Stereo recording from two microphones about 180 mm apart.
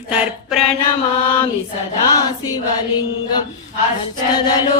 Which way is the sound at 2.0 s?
20° left (ahead or behind).